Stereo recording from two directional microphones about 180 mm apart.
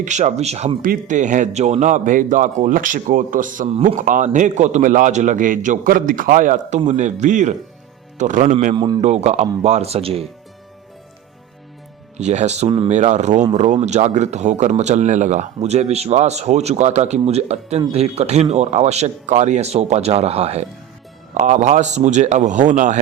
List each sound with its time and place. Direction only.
0.0 s a man's voice: 40° right (ahead or behind); by 9.0 s 25° right (ahead or behind)
9.0 s a man's voice: 40° right (ahead or behind)
12.1 s a man's voice: 40° right (ahead or behind)
12.9 s a man's voice: 40° right (ahead or behind)